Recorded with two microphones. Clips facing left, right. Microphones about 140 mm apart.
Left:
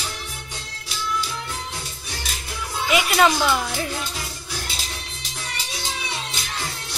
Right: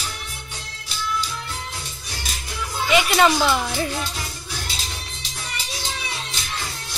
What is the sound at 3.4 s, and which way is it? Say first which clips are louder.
Speech: right 1 dB; 5° right (ahead or behind).